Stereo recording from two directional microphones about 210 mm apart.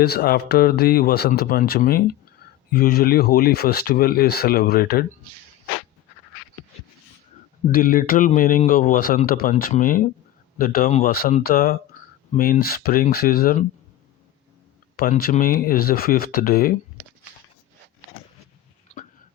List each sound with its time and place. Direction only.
0.0 s speech: 50° left (ahead or behind)
7.7 s a man's voice: 40° left (ahead or behind)
14.9 s speech: 45° left (ahead or behind)
18.9 s hiccup: 30° left (ahead or behind)